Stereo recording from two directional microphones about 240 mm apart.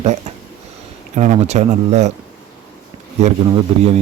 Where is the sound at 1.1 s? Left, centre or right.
Right.